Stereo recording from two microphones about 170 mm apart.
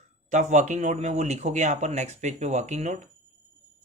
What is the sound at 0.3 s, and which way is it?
Speech, 45° right (ahead or behind).